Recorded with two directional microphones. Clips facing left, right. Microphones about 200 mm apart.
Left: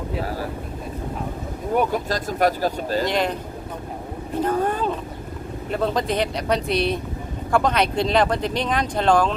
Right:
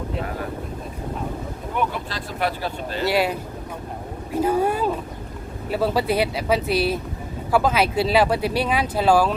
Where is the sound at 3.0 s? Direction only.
5° right (ahead or behind).